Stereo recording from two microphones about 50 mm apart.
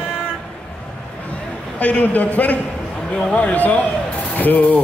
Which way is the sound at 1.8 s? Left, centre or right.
Left.